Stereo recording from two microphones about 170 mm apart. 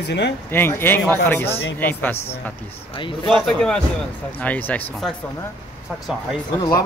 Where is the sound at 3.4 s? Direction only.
5° left (ahead or behind).